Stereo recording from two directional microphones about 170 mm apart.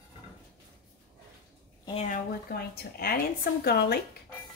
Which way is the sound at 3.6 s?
65° left (ahead or behind).